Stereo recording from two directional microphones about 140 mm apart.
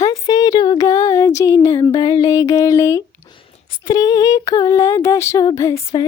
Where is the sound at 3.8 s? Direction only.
25° left (ahead or behind).